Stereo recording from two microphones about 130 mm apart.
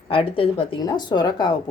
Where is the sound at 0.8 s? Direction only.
35° left (ahead or behind).